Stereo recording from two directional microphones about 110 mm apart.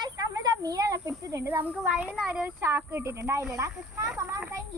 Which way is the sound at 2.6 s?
25° right (ahead or behind).